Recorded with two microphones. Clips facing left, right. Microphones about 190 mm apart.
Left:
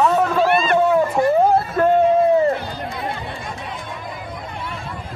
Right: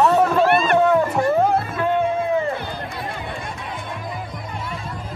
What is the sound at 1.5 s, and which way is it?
Music, 40° left (ahead or behind).